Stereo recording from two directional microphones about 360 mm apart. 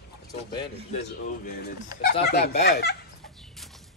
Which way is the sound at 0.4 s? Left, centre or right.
Centre.